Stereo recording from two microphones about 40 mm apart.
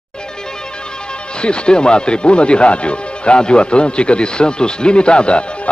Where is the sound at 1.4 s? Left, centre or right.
Left.